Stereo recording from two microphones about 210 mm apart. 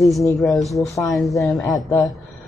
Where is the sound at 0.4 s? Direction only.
Centre (ahead or behind).